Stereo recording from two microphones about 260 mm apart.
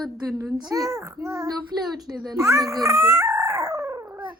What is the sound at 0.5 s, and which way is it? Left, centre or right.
A child's voice, centre.